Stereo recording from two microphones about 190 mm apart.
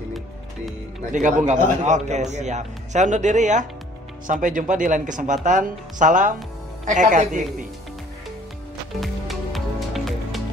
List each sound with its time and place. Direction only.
1.1 s a man's voice: 40° right (ahead or behind)
9.0 s music: centre (ahead or behind)